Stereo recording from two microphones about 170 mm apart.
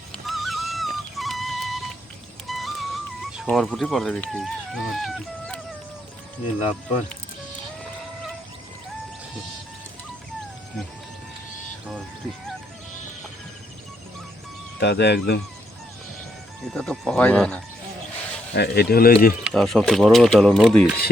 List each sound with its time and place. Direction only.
0.3 s music: centre (ahead or behind)
14.8 s speech: 80° left
16.6 s speech: centre (ahead or behind)
18.5 s speech: 70° left (ahead or behind)
19.5 s speech: centre (ahead or behind)